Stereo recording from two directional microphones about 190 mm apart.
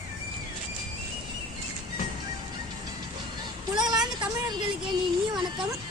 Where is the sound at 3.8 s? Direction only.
20° right (ahead or behind).